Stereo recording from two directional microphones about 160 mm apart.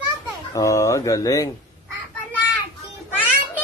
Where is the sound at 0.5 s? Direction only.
20° left (ahead or behind).